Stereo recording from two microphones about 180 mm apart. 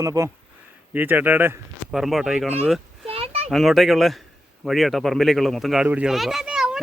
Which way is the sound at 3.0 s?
30° right (ahead or behind).